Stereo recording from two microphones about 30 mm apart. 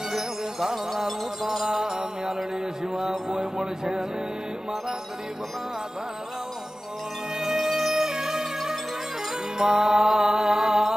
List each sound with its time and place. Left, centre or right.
0.1 s music: centre
3.2 s a sound: right
7.3 s music: centre
9.6 s music: right